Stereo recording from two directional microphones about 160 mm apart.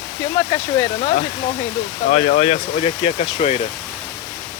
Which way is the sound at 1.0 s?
40° left (ahead or behind).